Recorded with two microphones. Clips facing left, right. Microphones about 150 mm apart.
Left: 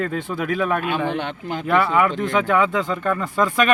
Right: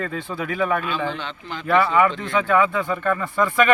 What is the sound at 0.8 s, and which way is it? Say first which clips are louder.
Speech: left 3 dB; 60° left (ahead or behind).